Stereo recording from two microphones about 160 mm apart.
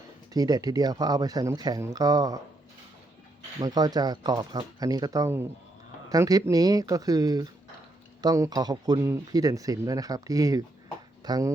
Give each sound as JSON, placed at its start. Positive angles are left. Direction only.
{"t": 0.3, "sound": "speech", "side_deg": -25}
{"t": 3.6, "sound": "speech", "side_deg": -25}